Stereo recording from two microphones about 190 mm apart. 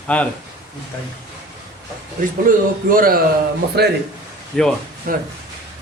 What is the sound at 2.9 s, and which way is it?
Speech, 50° right (ahead or behind).